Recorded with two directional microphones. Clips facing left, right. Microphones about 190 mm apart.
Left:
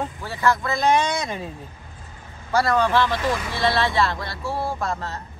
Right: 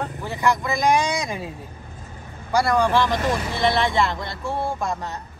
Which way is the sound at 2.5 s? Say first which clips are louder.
Right 1 dB; 10° right (ahead or behind).